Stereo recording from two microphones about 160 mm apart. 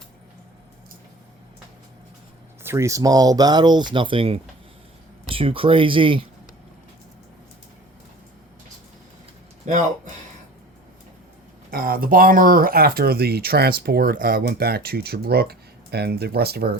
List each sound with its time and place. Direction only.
2.6 s speech: 20° right (ahead or behind)
11.7 s speech: 65° right (ahead or behind)